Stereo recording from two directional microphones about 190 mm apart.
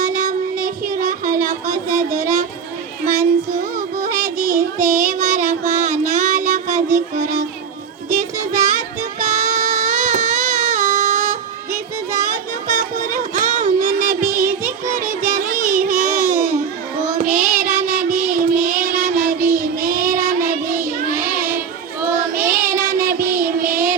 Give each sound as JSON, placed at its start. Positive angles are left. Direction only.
{"t": 0.0, "sound": "child singing", "side_deg": -45}
{"t": 3.8, "sound": "music", "side_deg": -45}
{"t": 4.9, "sound": "child singing", "side_deg": -40}
{"t": 6.9, "sound": "a sound", "side_deg": -40}
{"t": 8.1, "sound": "music", "side_deg": -40}
{"t": 9.2, "sound": "child singing", "side_deg": -40}